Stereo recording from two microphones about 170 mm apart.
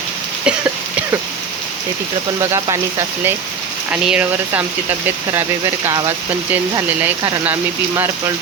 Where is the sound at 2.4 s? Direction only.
20° right (ahead or behind).